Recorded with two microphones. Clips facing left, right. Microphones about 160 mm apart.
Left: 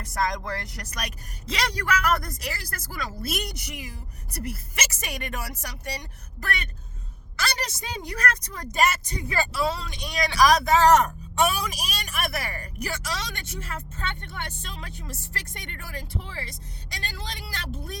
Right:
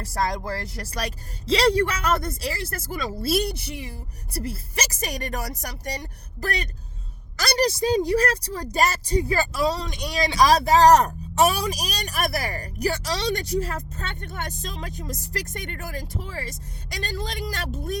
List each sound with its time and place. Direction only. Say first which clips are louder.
0.0 s a woman's voice: right 2 dB; 35° right (ahead or behind)
10.2 s a woman's voice: right 1 dB; 25° right (ahead or behind); by 18.0 s 45° right (ahead or behind)